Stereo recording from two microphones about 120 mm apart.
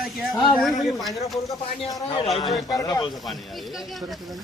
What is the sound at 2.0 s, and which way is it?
Speech, 55° left (ahead or behind).